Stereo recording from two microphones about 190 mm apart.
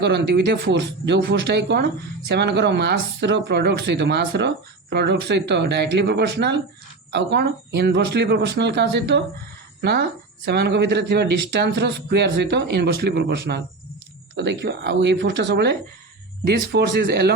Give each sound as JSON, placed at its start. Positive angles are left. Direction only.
{"t": 0.0, "sound": "speech", "side_deg": -60}